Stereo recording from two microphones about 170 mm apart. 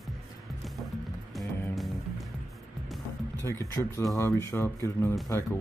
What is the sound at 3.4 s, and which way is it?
Speech, 15° left (ahead or behind).